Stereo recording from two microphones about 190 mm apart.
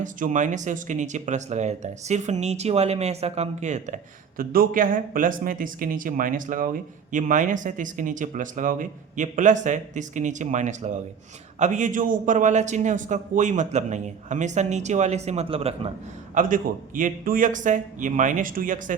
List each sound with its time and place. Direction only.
0.0 s speech: 40° right (ahead or behind)
16.3 s a man's voice: 45° right (ahead or behind)